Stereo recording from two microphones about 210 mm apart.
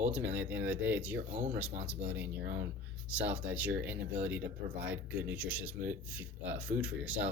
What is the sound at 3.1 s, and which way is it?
Speech, 5° right (ahead or behind).